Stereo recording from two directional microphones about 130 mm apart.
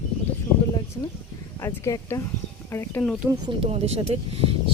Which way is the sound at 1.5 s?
20° left (ahead or behind).